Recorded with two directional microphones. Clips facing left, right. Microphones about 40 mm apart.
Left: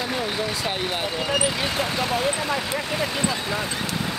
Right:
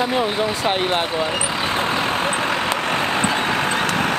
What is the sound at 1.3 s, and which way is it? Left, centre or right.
Speech, centre.